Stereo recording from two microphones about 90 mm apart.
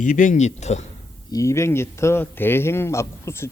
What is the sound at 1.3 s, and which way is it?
Speech, 35° left (ahead or behind).